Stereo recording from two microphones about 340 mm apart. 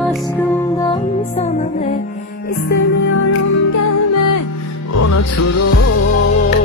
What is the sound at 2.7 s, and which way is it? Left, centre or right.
Music, left.